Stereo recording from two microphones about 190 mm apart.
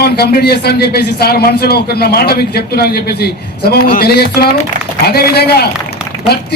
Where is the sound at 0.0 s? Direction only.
55° left (ahead or behind).